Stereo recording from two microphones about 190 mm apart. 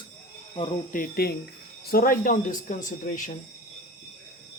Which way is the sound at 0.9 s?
55° left (ahead or behind).